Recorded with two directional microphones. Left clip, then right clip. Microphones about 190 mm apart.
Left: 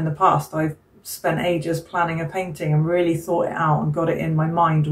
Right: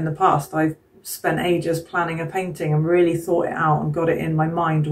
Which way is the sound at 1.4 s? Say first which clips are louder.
Right 1 dB; 25° right (ahead or behind).